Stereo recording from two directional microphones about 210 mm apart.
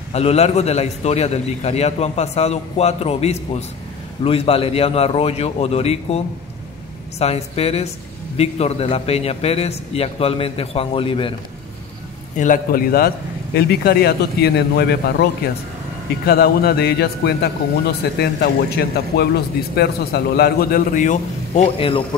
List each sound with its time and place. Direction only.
0.1 s a man's voice: 30° left (ahead or behind)
12.4 s a man's voice: 40° left (ahead or behind)
16.3 s a man's voice: 50° left (ahead or behind); by 22.0 s 25° left (ahead or behind)